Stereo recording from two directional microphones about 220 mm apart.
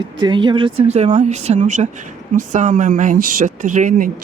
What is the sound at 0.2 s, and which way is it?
Speech, 20° right (ahead or behind).